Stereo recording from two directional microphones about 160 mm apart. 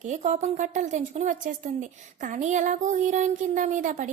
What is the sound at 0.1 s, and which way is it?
A woman's voice, 45° right (ahead or behind).